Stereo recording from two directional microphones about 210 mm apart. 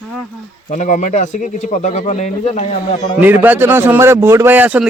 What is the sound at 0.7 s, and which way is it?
Speech, 35° left (ahead or behind).